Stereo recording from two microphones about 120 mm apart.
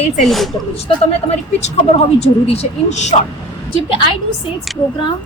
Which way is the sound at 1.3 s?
65° left (ahead or behind).